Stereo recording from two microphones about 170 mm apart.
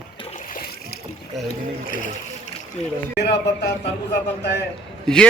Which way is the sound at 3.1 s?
80° left.